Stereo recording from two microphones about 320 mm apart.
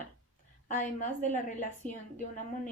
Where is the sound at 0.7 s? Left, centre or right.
Left.